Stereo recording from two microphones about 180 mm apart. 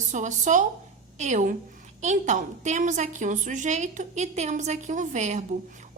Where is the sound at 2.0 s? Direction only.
40° right (ahead or behind).